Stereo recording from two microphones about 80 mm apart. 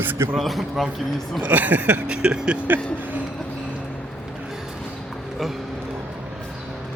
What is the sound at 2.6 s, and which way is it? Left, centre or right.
Speech, right.